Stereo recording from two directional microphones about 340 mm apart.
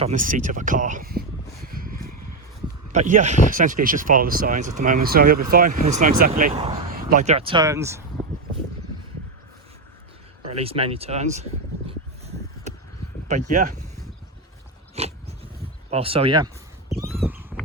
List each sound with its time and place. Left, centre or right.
0.0 s speech: right
1.6 s a sound: right
2.9 s speech: right
10.4 s speech: centre
11.9 s a sound: centre
13.2 s speech: right
14.9 s dog: centre
15.9 s speech: centre
16.9 s crow: centre